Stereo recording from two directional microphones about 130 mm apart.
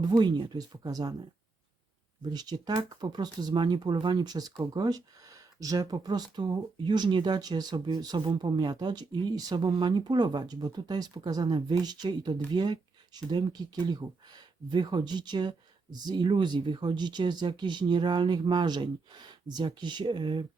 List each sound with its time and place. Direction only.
0.0 s speech: 35° right (ahead or behind)
2.3 s speech: 30° right (ahead or behind)